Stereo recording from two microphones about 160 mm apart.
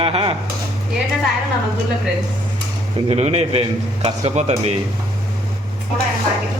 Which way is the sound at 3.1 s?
40° right (ahead or behind).